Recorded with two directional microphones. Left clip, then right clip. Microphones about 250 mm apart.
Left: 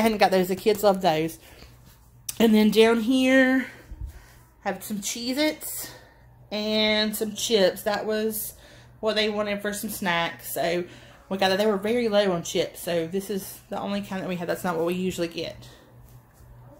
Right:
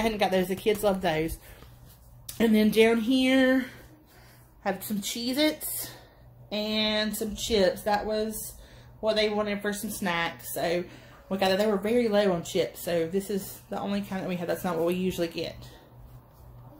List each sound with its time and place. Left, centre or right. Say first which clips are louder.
0.0 s speech: left 5 dB; left
2.2 s speech: left 4 dB; left; by 3.6 s centre
4.6 s speech: left 1 dB; centre